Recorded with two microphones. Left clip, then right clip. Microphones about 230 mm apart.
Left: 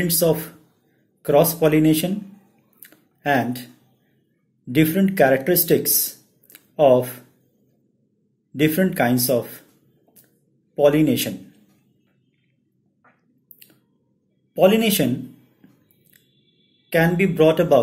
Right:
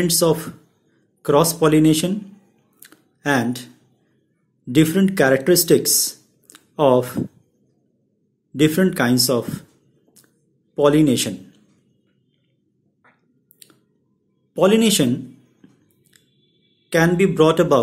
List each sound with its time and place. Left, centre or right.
0.0 s speech: centre
2.8 s a sound: centre
4.7 s speech: centre
6.5 s a sound: centre
8.5 s speech: centre
10.7 s speech: centre
14.5 s speech: centre
16.9 s speech: centre